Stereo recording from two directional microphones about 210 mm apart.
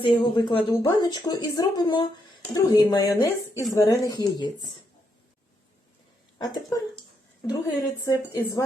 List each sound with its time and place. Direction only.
0.0 s speech: 20° left (ahead or behind)
6.4 s speech: 20° left (ahead or behind)
8.0 s speech: 15° left (ahead or behind)